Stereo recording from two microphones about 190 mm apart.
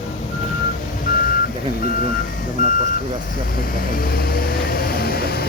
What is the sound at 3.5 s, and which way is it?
Vehicle, 50° left (ahead or behind).